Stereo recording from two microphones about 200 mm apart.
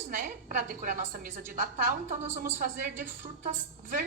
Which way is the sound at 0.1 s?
45° right (ahead or behind).